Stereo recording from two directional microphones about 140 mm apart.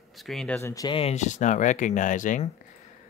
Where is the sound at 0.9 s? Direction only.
45° left (ahead or behind); by 2.4 s 65° left (ahead or behind).